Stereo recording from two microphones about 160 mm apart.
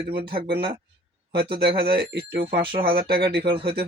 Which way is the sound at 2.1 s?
80° right.